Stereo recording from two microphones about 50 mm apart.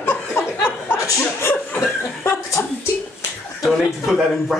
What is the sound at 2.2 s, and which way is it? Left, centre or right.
Speech, left.